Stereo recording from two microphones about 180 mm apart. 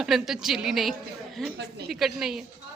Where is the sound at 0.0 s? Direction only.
Centre (ahead or behind).